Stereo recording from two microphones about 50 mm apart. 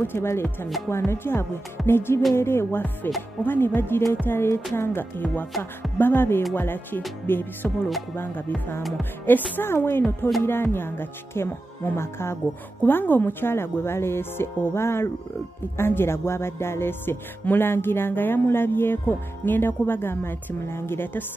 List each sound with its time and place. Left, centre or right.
0.0 s music: left
0.8 s speech: left
1.9 s music: left
2.3 s speech: left
3.0 s music: left
5.2 s music: left
5.6 s music: left
12.8 s music: left